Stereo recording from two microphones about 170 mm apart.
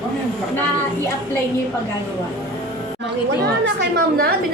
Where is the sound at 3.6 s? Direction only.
85° right.